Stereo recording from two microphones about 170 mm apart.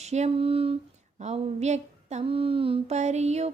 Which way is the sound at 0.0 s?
40° right (ahead or behind).